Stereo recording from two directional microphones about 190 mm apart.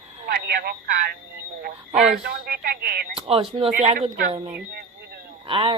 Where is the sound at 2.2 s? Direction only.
55° right (ahead or behind).